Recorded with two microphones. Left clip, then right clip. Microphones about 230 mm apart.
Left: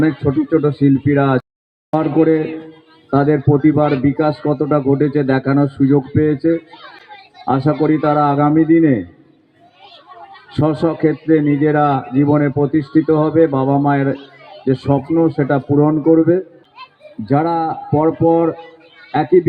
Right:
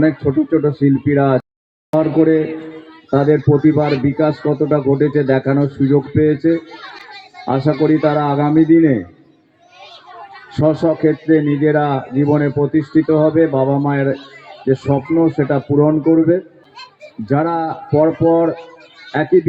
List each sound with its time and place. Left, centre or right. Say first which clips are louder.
0.5 s a man's voice: left 3 dB; left
10.6 s a man's voice: right 2 dB; left